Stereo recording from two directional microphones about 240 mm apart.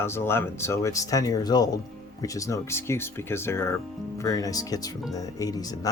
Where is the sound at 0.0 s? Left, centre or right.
Centre.